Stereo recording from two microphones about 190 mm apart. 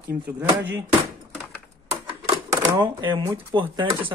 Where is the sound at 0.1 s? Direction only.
10° right (ahead or behind).